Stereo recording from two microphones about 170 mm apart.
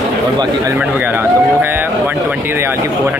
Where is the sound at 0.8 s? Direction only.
10° right (ahead or behind).